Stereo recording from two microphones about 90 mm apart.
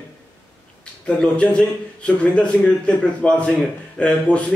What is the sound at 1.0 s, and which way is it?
A man's voice, 10° left (ahead or behind).